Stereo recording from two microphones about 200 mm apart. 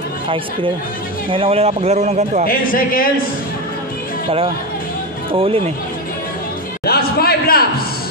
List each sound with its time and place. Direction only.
1.3 s speech: 30° right (ahead or behind)
2.4 s a man's voice: 45° left (ahead or behind)
5.3 s speech: 30° right (ahead or behind)
6.9 s a sound: 50° left (ahead or behind)